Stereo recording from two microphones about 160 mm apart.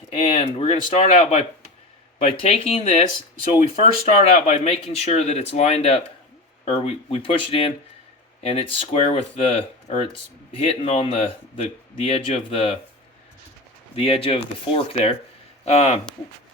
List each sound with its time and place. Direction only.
0.1 s speech: 35° left (ahead or behind)
4.0 s speech: 40° left (ahead or behind)
13.9 s speech: 35° left (ahead or behind)